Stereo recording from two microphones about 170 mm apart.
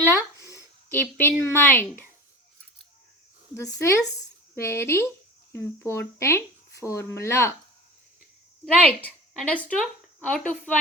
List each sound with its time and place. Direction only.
0.3 s a sound: 15° left (ahead or behind)
1.2 s a woman's voice: 15° left (ahead or behind)
3.5 s speech: 15° left (ahead or behind)
8.6 s a woman's voice: 5° left (ahead or behind)